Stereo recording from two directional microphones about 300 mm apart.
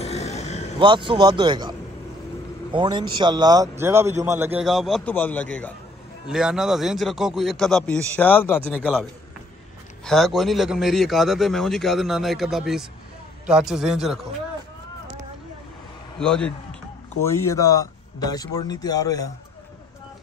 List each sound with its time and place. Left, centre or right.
0.0 s a sound: left
0.7 s a man's voice: centre
10.0 s a man's voice: centre
16.2 s a man's voice: centre